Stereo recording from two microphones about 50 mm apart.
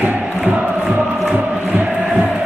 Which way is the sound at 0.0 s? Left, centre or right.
Right.